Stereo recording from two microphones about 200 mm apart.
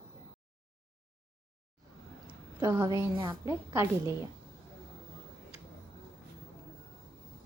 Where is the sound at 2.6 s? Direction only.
20° right (ahead or behind).